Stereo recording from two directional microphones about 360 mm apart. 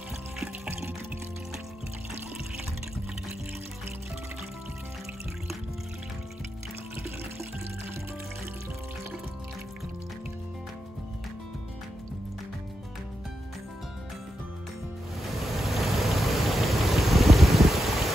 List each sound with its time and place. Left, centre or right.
0.4 s water: centre
15.5 s vehicle: centre